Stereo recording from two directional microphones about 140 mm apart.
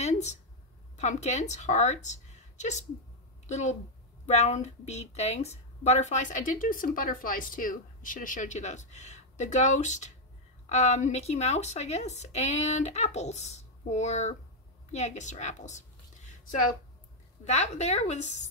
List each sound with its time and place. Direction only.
0.0 s a sound: 55° left (ahead or behind)
0.9 s a woman's voice: 55° left (ahead or behind)
17.5 s speech: 55° left (ahead or behind)